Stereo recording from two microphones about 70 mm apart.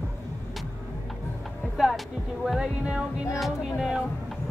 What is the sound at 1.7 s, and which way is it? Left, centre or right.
Speech, centre.